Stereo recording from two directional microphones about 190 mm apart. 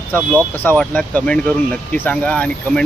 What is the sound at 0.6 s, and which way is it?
Speech, 5° left (ahead or behind).